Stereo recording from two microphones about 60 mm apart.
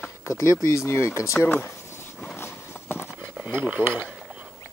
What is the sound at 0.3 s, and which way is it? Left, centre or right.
Speech, left.